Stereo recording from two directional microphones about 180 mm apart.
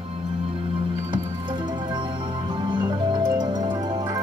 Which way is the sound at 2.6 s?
25° right (ahead or behind).